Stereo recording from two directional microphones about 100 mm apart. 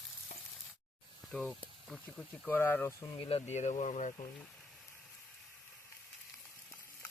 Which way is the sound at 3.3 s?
80° left.